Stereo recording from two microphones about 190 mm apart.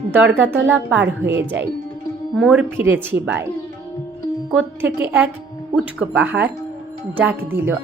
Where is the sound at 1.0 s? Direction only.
70° right (ahead or behind).